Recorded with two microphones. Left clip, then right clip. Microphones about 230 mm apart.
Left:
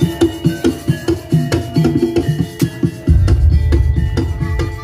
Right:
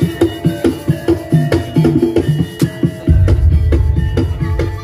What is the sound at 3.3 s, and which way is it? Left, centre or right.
Music, left.